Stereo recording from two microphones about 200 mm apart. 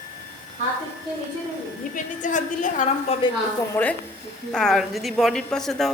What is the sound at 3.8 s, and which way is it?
A woman's voice, 10° left (ahead or behind).